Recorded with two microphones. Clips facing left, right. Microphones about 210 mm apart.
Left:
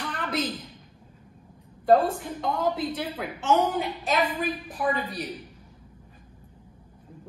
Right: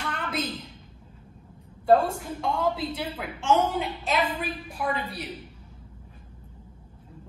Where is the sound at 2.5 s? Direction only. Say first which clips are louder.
Left 1 dB; 10° right (ahead or behind).